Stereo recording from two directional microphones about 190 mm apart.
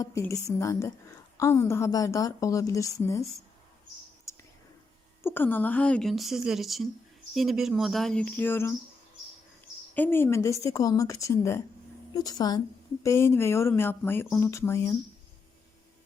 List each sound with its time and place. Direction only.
0.0 s a woman's voice: 15° left (ahead or behind)
4.3 s whispering: 15° left (ahead or behind)
5.2 s a woman's voice: 10° left (ahead or behind)
9.9 s a woman's voice: 10° left (ahead or behind)